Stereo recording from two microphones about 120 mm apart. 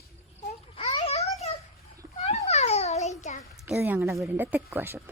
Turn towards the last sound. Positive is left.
turn(degrees=-20)  # may be behind; listen again after turning